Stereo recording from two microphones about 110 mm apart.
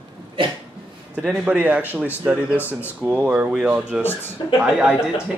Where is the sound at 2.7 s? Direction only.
20° left (ahead or behind).